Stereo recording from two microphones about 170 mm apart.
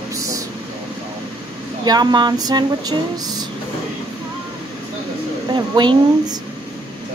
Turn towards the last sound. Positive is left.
turn(degrees=-25)  # may be behind; listen again after turning